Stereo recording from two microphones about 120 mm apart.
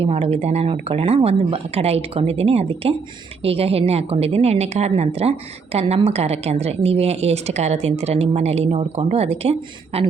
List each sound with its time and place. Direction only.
0.0 s a woman's voice: 55° right (ahead or behind)
9.6 s speech: 45° right (ahead or behind)